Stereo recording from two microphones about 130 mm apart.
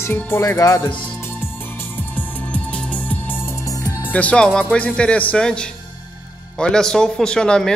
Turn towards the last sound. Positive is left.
turn(degrees=5)  # may be behind; listen again after turning